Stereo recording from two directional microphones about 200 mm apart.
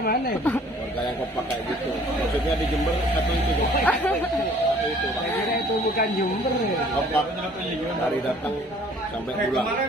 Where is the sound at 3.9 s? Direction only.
5° left (ahead or behind).